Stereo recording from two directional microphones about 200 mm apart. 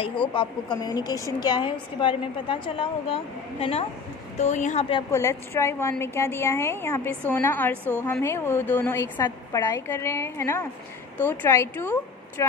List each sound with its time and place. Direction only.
0.0 s a woman's voice: 25° left (ahead or behind)
5.1 s a woman's voice: 15° left (ahead or behind)
7.7 s a woman's voice: 10° right (ahead or behind)
8.0 s a woman's voice: 15° left (ahead or behind)